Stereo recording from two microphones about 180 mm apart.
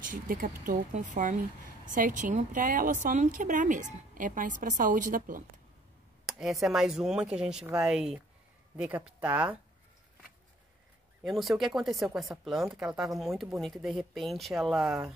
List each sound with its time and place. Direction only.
0.0 s speech: 50° right (ahead or behind)
6.2 s speech: centre (ahead or behind)
11.2 s speech: centre (ahead or behind)